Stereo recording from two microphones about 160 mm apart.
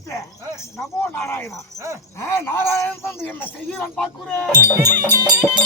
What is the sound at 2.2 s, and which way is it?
Speech, 15° left (ahead or behind).